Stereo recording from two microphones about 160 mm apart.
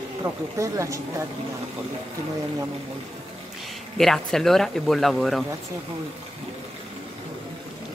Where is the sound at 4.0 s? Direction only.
5° left (ahead or behind).